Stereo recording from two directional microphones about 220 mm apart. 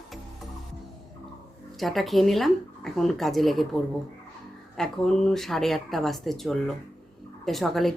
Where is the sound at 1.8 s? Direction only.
Centre (ahead or behind).